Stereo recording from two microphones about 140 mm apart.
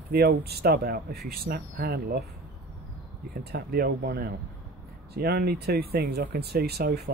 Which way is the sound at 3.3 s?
90° right.